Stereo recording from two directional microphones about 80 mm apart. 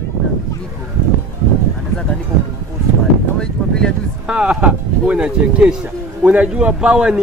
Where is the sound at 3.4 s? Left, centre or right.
Centre.